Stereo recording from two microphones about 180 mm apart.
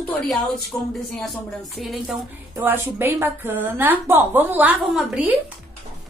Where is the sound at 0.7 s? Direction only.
15° left (ahead or behind).